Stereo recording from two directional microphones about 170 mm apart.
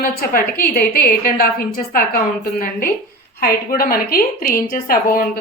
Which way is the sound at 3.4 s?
60° left (ahead or behind).